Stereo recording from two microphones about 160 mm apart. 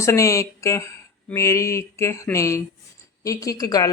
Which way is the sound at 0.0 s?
20° left (ahead or behind).